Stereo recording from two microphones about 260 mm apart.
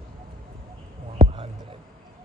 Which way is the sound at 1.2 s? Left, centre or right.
Right.